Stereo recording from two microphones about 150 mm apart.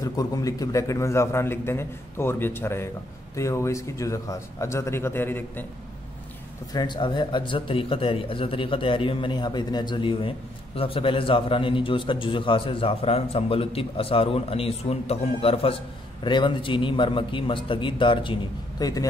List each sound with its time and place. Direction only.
0.0 s a man's voice: 25° left (ahead or behind)
6.7 s a man's voice: 30° left (ahead or behind)